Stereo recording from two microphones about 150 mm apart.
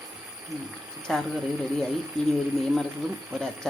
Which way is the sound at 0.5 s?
25° right (ahead or behind).